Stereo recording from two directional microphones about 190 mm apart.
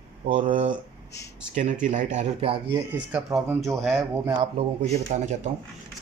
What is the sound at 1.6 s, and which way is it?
Speech, 40° right (ahead or behind).